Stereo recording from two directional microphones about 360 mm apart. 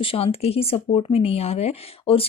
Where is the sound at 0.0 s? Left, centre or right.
Centre.